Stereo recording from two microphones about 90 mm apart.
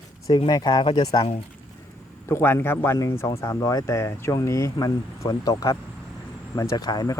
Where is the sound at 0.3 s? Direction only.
55° left (ahead or behind).